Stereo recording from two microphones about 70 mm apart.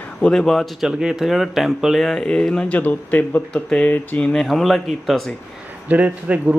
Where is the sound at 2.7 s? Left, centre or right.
Left.